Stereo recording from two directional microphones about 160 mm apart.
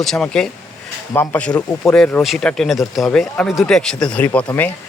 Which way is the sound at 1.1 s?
15° left (ahead or behind).